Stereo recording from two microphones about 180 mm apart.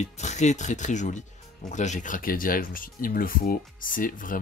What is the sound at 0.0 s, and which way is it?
Speech, 40° left (ahead or behind).